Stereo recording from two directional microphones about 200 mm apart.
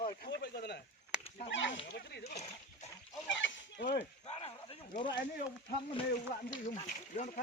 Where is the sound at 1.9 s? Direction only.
55° left (ahead or behind).